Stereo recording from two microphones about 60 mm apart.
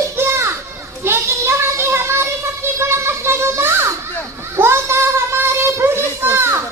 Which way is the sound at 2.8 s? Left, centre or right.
Right.